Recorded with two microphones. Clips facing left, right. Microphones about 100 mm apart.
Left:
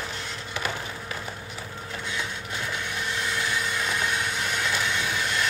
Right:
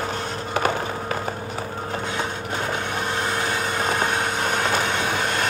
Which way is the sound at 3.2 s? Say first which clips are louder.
Right 3 dB; 45° right (ahead or behind).